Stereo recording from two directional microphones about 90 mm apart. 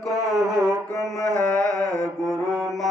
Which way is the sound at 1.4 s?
10° left (ahead or behind).